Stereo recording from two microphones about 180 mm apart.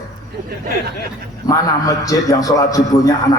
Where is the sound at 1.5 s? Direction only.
20° left (ahead or behind).